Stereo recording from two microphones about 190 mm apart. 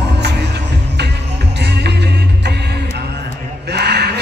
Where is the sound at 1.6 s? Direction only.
60° right (ahead or behind).